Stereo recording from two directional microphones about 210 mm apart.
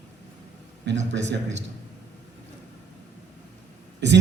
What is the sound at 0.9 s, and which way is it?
Speech, 55° right (ahead or behind).